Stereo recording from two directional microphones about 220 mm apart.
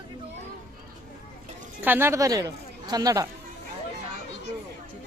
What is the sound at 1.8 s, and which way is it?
A woman's voice, 10° right (ahead or behind).